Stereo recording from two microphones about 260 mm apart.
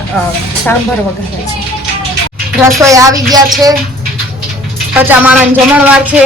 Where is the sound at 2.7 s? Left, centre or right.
Centre.